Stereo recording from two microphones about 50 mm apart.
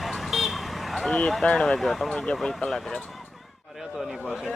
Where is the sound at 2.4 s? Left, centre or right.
Centre.